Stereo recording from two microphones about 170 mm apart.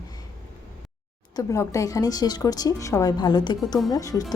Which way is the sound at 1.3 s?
20° left (ahead or behind).